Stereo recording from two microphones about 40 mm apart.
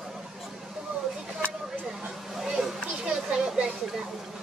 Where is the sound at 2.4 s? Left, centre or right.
Centre.